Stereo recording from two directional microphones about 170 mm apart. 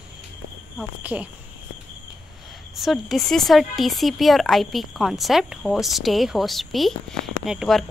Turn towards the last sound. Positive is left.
turn(degrees=0)  # may be behind; listen again after turning